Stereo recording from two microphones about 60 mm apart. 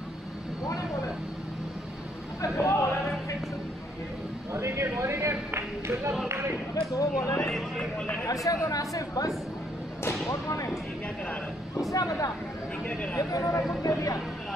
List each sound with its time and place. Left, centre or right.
2.5 s a sound: left
4.5 s a sound: right
6.7 s speech: left
7.4 s speech: centre
8.5 s speech: left
10.2 s speech: left
11.9 s speech: left
13.3 s speech: left